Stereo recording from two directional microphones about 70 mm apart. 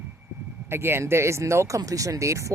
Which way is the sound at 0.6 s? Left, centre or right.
Right.